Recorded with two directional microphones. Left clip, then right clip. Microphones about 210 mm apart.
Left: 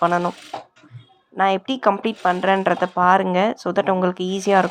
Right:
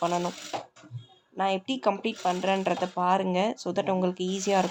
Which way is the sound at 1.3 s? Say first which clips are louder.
Left 9 dB; 15° left (ahead or behind).